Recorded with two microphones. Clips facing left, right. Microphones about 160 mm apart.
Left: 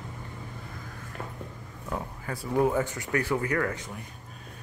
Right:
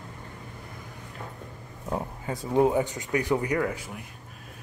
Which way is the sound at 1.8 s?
25° right (ahead or behind).